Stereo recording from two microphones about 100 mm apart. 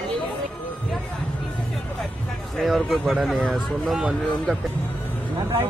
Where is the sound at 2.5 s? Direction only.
Centre (ahead or behind).